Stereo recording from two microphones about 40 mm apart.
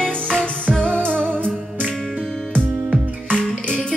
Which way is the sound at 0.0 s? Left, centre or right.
Centre.